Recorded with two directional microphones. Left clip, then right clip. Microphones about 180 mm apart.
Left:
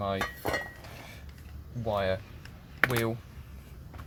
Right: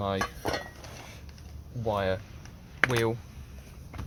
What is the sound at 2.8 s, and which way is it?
Speech, 5° left (ahead or behind).